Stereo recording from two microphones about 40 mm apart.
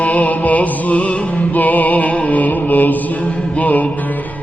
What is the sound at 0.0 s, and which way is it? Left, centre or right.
Music, left.